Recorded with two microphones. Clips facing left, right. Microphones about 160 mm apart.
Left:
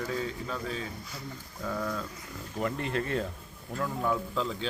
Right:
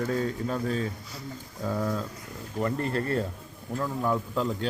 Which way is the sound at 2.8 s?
40° right (ahead or behind).